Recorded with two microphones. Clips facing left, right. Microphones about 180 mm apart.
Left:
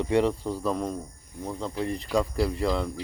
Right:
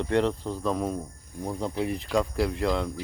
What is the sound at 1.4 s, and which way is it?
Speech, 10° right (ahead or behind).